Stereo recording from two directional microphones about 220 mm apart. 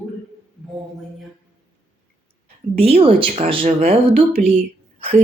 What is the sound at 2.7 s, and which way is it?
A woman's voice, 25° right (ahead or behind).